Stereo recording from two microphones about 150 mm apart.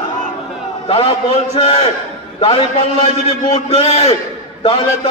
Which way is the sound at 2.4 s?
40° left (ahead or behind).